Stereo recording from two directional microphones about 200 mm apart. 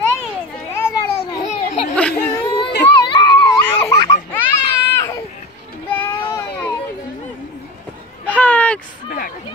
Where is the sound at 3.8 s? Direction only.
15° left (ahead or behind).